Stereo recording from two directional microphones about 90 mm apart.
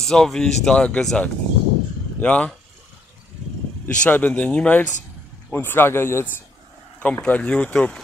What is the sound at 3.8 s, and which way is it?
Speech, 15° left (ahead or behind).